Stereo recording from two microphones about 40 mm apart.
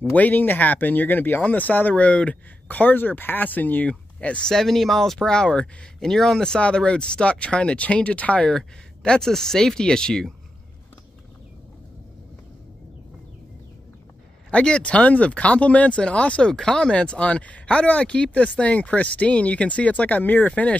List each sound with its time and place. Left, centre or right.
0.1 s speech: left
2.0 s speech: left
2.7 s speech: left
4.2 s speech: left
4.5 s speech: centre; by 8.5 s left
8.5 s speech: centre
14.5 s speech: left
16.4 s speech: centre; by 20.4 s left
20.4 s speech: left